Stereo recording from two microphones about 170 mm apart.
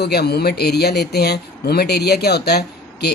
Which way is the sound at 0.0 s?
70° left (ahead or behind).